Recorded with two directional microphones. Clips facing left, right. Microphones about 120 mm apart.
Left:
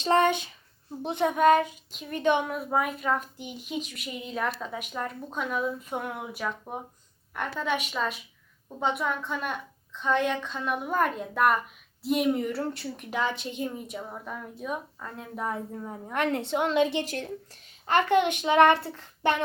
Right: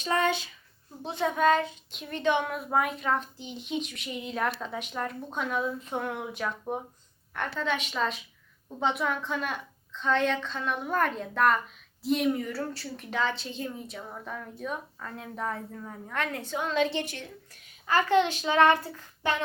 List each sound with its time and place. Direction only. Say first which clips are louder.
0.0 s speech: left 5 dB; 30° left (ahead or behind)
1.0 s a woman's voice: left 3 dB; 20° left (ahead or behind)
2.5 s a woman's voice: even; centre (ahead or behind)
9.9 s a woman's voice: even; 10° left (ahead or behind)
12.3 s a woman's voice: left 3 dB; 25° left (ahead or behind)
17.1 s speech: left 8 dB; 40° left (ahead or behind)
18.2 s a woman's voice: left 3 dB; 15° left (ahead or behind)